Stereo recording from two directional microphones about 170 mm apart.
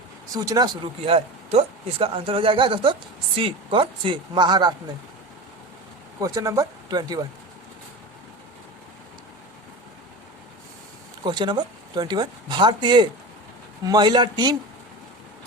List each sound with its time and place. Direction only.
0.3 s speech: 20° right (ahead or behind)
6.1 s speech: 20° right (ahead or behind)
11.2 s speech: 25° right (ahead or behind)